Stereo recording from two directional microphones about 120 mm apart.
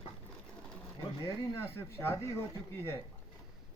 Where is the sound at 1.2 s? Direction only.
20° left (ahead or behind).